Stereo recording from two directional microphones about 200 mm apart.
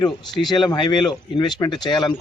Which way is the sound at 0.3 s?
20° left (ahead or behind).